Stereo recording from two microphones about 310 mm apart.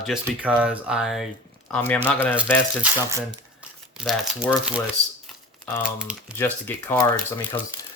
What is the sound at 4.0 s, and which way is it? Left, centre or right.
Speech, centre.